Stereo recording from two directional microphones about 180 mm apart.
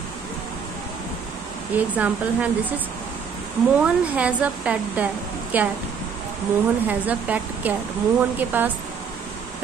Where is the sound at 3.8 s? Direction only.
5° right (ahead or behind).